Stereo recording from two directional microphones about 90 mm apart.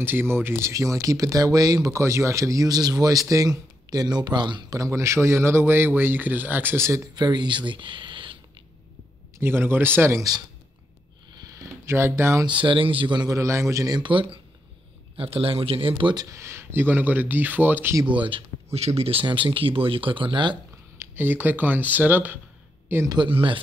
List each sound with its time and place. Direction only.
0.0 s speech: 25° right (ahead or behind); by 4.7 s 55° right (ahead or behind)
4.7 s a man's voice: 35° right (ahead or behind)
7.2 s speech: 55° right (ahead or behind)
9.4 s a man's voice: 25° right (ahead or behind)
11.4 s a sound: 30° right (ahead or behind)
12.4 s speech: 65° right (ahead or behind)
13.3 s speech: 35° right (ahead or behind)
13.9 s speech: 65° right (ahead or behind)
15.1 s speech: 90° right; by 16.2 s 75° right (ahead or behind)
16.2 s a man's voice: 35° right (ahead or behind)
18.1 s speech: 65° right (ahead or behind)
19.0 s speech: 80° right; by 20.5 s 65° right (ahead or behind)
21.0 s a man's voice: 25° right (ahead or behind)
23.2 s speech: 75° right (ahead or behind)